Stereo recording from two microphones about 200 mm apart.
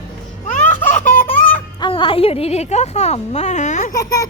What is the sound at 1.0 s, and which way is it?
Baby laughter, 40° left (ahead or behind).